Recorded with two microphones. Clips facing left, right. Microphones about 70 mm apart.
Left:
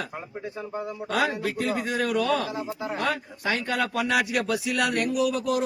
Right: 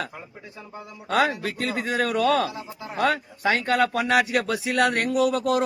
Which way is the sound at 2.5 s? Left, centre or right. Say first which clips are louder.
Left 5 dB; left.